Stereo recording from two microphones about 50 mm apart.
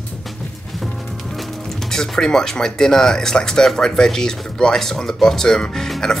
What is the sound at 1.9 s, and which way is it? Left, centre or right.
Speech, centre.